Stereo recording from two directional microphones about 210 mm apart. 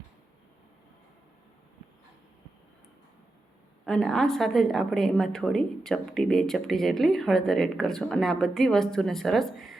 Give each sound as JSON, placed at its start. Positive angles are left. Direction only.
{"t": 3.8, "sound": "a woman's voice", "side_deg": 5}